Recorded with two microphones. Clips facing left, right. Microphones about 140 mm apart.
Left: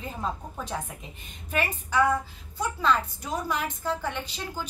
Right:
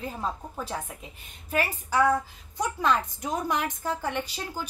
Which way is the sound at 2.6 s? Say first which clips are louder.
Even; 15° right (ahead or behind).